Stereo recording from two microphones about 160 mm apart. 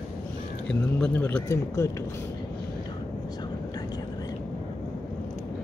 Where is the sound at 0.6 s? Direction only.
10° left (ahead or behind).